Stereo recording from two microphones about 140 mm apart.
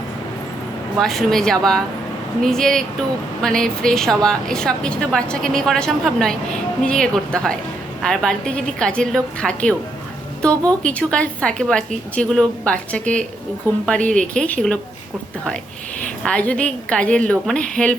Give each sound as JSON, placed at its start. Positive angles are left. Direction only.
{"t": 0.9, "sound": "a woman's voice", "side_deg": 0}
{"t": 10.8, "sound": "a woman's voice", "side_deg": 5}
{"t": 16.2, "sound": "a woman's voice", "side_deg": 10}